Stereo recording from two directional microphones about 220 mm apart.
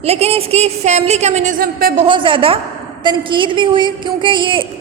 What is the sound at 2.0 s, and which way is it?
A woman's voice, 20° right (ahead or behind).